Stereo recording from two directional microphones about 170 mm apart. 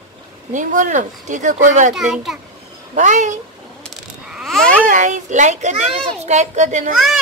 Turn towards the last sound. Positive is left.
turn(degrees=-45)  # may be behind; listen again after turning